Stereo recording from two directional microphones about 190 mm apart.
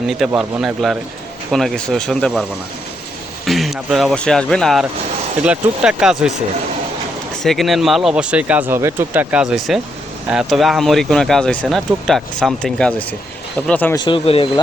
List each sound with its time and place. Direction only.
0.1 s speech: centre (ahead or behind)
7.4 s speech: centre (ahead or behind)
13.9 s speech: 25° left (ahead or behind)